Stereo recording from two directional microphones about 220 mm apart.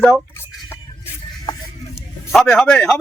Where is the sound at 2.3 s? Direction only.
5° left (ahead or behind).